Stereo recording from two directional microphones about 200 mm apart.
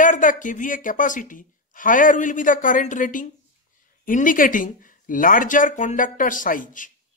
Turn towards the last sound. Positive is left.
turn(degrees=40)  # may be behind; listen again after turning